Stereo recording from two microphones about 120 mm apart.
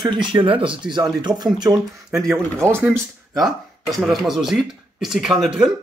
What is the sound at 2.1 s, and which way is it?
Speech, 5° right (ahead or behind).